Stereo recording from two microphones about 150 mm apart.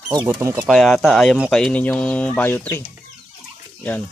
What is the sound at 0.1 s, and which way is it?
Speech, 30° right (ahead or behind).